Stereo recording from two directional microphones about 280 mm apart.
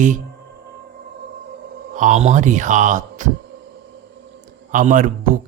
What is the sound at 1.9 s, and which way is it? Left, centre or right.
Speech, right.